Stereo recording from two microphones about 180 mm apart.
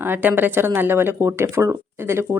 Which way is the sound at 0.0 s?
10° right (ahead or behind).